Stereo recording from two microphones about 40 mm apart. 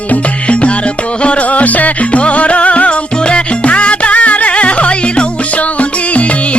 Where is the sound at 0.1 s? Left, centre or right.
Left.